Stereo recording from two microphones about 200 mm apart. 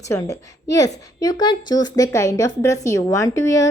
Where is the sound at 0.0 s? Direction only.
15° left (ahead or behind).